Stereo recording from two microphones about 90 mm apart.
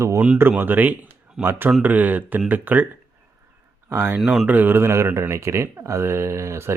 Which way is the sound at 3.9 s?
25° right (ahead or behind).